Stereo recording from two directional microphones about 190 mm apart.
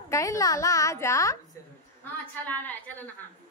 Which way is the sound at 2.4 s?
10° left (ahead or behind).